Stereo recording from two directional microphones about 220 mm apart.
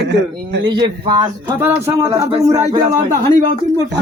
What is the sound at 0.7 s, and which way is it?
Speech, 20° right (ahead or behind).